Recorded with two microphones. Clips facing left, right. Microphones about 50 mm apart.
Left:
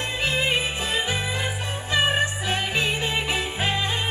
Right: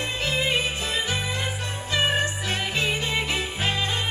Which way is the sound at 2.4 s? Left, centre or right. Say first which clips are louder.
Left 1 dB; centre.